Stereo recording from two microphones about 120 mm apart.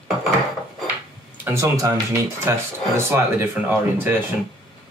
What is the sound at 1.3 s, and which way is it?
Speech, 15° right (ahead or behind).